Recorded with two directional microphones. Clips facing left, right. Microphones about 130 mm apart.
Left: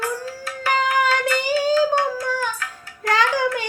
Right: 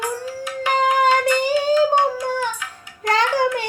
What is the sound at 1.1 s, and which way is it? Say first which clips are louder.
Child singing: right 4 dB; 20° right (ahead or behind).